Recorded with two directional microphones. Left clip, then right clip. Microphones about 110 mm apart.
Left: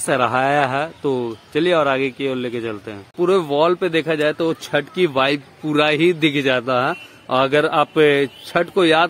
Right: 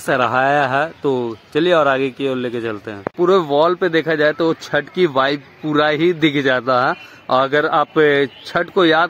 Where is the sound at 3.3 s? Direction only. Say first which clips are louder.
Right 2 dB; 30° left (ahead or behind).